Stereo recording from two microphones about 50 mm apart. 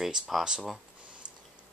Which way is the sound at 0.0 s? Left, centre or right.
Centre.